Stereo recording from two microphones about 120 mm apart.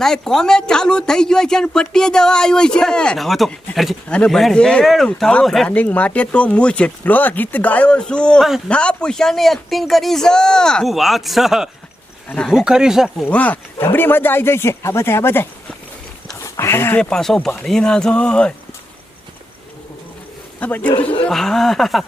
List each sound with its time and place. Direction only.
0.0 s speech: 5° left (ahead or behind)
8.4 s speech: 5° right (ahead or behind)
8.7 s speech: 10° left (ahead or behind)
13.2 s speech: 15° left (ahead or behind)
16.3 s a sound: 25° left (ahead or behind)
17.0 s speech: 5° left (ahead or behind)
20.6 s speech: 15° left (ahead or behind)
21.2 s speech: 5° left (ahead or behind)